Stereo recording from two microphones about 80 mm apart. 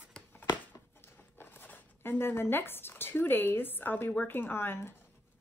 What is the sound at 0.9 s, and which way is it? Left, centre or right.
Speech, left.